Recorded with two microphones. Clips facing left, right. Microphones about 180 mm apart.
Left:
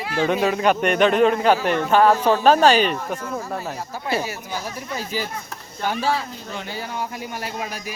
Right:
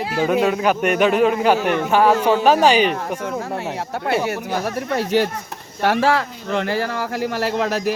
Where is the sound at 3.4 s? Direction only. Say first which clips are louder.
Right 3 dB; 70° right (ahead or behind).